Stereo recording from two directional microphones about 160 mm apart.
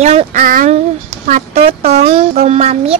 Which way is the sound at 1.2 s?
45° right (ahead or behind).